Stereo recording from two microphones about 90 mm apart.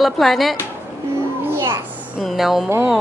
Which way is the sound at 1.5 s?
30° right (ahead or behind).